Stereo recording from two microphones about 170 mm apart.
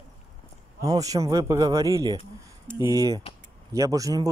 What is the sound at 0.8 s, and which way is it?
Speech, 20° right (ahead or behind).